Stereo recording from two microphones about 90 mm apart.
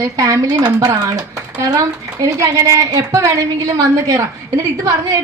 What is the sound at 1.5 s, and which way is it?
A woman's voice, 40° right (ahead or behind).